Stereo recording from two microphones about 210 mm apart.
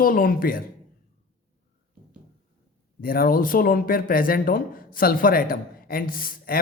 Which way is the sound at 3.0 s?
45° left (ahead or behind).